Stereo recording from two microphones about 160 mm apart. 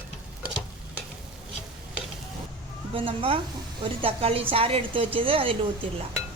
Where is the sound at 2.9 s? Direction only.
35° right (ahead or behind).